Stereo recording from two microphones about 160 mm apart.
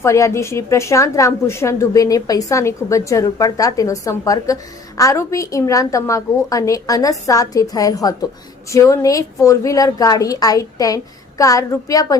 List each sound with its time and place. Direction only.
0.0 s a woman's voice: 20° left (ahead or behind)